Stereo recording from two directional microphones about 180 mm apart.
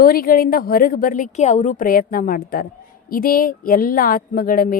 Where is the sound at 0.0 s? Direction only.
55° left (ahead or behind).